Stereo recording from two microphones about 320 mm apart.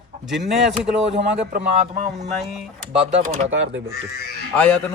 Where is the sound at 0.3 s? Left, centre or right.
Centre.